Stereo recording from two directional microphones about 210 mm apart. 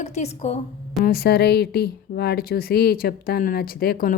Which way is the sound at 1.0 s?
45° left (ahead or behind).